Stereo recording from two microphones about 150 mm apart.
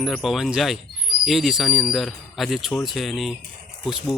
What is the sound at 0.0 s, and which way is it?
A man's voice, centre (ahead or behind).